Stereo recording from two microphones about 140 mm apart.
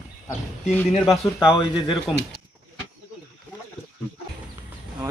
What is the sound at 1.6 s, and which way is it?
Speech, 30° left (ahead or behind).